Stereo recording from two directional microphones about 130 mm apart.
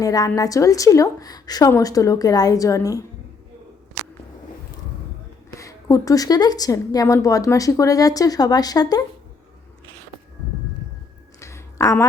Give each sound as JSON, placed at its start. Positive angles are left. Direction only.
{"t": 0.0, "sound": "a woman's voice", "side_deg": 30}
{"t": 5.5, "sound": "a woman's voice", "side_deg": 25}
{"t": 11.3, "sound": "a sound", "side_deg": 25}